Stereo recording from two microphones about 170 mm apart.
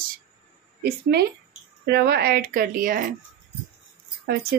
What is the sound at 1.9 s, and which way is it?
Speech, 70° right (ahead or behind).